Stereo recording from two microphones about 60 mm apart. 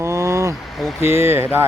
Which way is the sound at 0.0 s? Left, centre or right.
Right.